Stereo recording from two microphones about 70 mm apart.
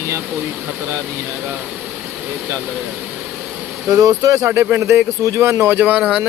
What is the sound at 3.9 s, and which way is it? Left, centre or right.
Speech, right.